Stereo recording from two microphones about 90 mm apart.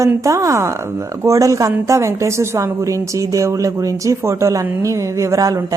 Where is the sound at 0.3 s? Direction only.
35° right (ahead or behind).